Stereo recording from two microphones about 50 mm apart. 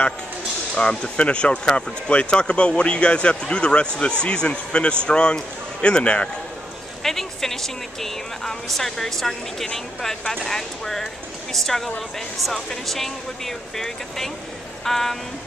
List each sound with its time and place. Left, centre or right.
0.7 s speech: centre
7.0 s a woman's voice: centre